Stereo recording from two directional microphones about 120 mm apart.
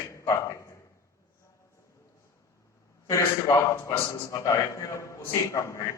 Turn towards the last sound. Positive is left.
turn(degrees=25)  # may be behind; listen again after turning